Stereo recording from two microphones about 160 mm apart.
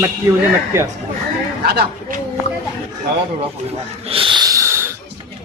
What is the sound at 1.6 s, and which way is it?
Speech, 70° right (ahead or behind).